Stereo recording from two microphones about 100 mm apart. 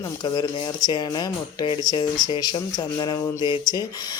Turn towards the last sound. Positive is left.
turn(degrees=45)  # may be behind; listen again after turning